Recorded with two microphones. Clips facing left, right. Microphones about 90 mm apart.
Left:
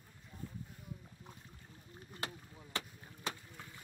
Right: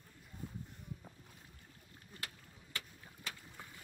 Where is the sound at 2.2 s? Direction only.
25° left (ahead or behind).